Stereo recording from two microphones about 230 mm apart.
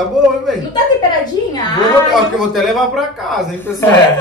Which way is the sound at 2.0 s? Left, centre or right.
Centre.